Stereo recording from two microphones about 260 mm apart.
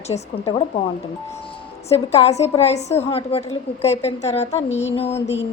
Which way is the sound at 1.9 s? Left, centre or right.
Left.